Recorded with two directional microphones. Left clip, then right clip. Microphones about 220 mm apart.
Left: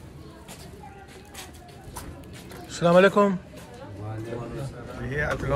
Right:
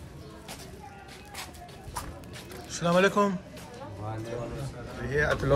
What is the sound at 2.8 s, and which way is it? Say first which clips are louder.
Speech: left 6 dB; 10° right (ahead or behind).